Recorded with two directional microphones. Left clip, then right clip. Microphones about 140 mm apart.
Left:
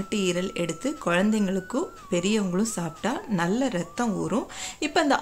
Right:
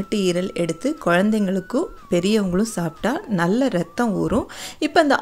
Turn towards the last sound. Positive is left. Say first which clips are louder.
# right 6 dB
turn(degrees=-40)  # may be behind; listen again after turning